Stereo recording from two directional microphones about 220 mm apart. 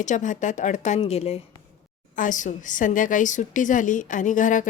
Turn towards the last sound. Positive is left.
turn(degrees=35)  # may be behind; listen again after turning